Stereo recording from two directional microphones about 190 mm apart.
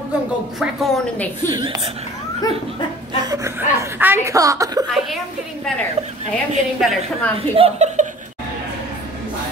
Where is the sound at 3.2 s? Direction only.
15° right (ahead or behind).